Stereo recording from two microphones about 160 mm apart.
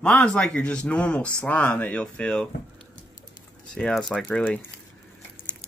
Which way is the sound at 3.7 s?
5° left (ahead or behind).